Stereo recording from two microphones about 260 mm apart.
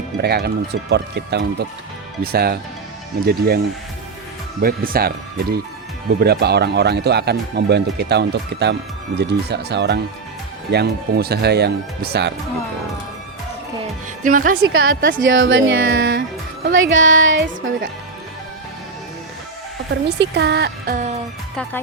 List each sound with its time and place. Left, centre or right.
0.2 s speech: right
4.6 s speech: right
14.3 s speech: right
14.6 s a woman's voice: right
14.8 s speech: right
15.2 s a woman's voice: right
19.9 s speech: right
21.5 s speech: centre